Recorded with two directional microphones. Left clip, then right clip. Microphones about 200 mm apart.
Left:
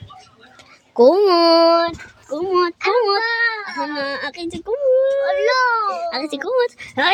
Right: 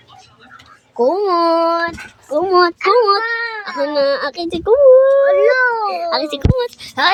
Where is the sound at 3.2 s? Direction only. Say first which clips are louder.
Left 1 dB; 30° left (ahead or behind).